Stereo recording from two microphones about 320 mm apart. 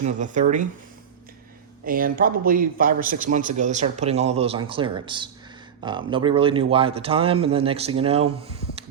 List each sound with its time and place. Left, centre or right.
0.0 s a man's voice: right
1.8 s a man's voice: right